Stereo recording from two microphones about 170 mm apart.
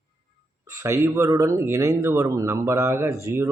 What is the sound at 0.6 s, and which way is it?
Speech, 15° right (ahead or behind).